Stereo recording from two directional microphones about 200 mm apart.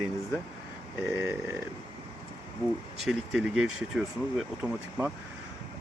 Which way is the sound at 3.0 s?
Centre (ahead or behind).